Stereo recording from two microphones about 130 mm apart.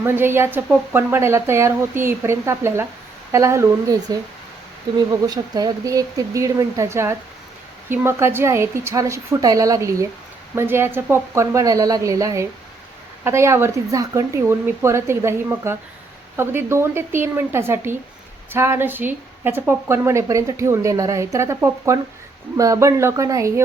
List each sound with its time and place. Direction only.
0.0 s a woman's voice: 20° right (ahead or behind)